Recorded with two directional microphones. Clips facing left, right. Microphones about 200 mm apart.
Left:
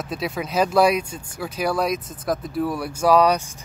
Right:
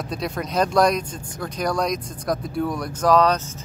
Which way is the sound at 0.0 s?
5° left (ahead or behind).